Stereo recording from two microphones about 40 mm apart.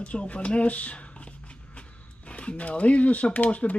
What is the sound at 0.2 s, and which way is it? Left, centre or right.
Speech, left.